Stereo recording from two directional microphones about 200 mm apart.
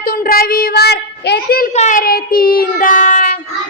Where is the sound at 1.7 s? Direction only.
35° left (ahead or behind).